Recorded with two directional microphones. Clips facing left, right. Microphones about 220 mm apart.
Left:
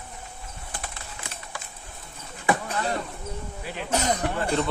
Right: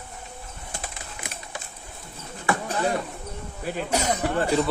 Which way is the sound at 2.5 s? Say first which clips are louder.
Left 2 dB; 20° left (ahead or behind).